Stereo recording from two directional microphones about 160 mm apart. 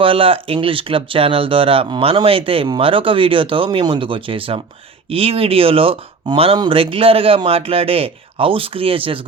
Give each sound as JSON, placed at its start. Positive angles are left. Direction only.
{"t": 0.0, "sound": "speech", "side_deg": -35}